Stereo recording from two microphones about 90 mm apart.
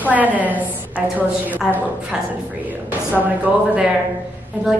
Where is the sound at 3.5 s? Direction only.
15° right (ahead or behind).